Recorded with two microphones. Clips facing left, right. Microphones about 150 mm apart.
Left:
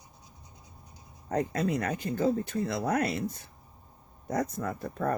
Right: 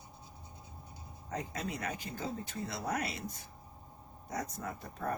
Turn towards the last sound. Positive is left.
turn(degrees=65)  # may be behind; listen again after turning